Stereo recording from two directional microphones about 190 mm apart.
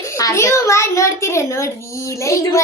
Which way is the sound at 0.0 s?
15° left (ahead or behind).